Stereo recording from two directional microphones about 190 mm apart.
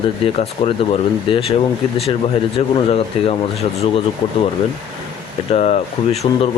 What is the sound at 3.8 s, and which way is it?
Speech, 30° left (ahead or behind).